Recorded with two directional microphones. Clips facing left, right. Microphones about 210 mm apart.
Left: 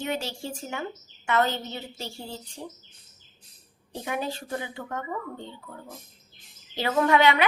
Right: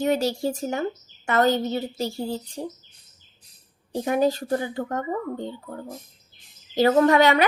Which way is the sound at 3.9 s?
40° right (ahead or behind).